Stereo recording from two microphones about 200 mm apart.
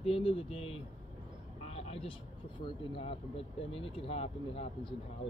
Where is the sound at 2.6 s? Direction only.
25° left (ahead or behind).